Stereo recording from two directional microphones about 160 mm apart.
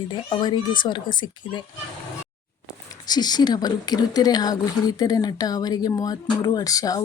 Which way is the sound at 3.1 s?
25° left (ahead or behind).